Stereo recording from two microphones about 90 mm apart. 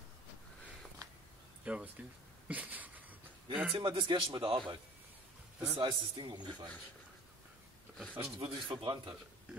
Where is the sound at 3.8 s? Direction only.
60° right (ahead or behind).